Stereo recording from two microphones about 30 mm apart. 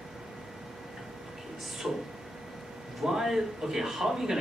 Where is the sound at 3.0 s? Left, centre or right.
Centre.